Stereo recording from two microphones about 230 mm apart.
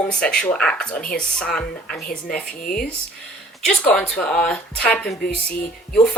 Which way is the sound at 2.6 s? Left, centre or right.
Left.